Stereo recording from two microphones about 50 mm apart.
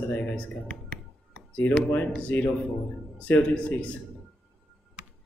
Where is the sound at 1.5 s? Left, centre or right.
Left.